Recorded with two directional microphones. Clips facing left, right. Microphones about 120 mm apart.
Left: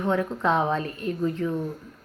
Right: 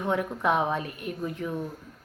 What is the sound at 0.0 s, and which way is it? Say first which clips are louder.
A woman's voice: left 2 dB; 15° right (ahead or behind).